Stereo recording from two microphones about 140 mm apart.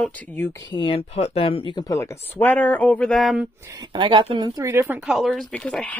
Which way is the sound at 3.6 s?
25° right (ahead or behind).